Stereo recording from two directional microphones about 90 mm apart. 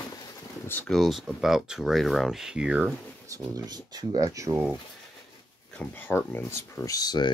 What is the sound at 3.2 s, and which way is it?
Speech, 40° right (ahead or behind).